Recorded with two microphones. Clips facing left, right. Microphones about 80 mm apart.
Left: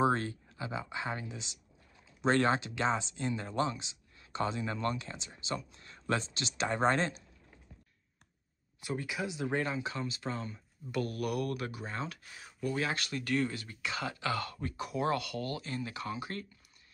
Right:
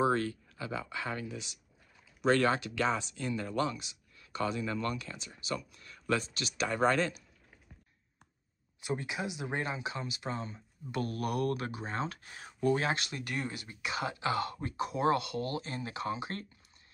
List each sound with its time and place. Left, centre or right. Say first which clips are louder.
0.0 s speech: even; left
8.8 s speech: right 1 dB; right
12.9 s speech: left 3 dB; right